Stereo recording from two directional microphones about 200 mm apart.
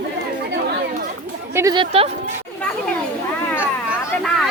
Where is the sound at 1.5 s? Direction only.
15° right (ahead or behind).